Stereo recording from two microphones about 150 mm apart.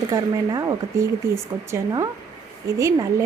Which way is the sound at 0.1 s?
25° right (ahead or behind).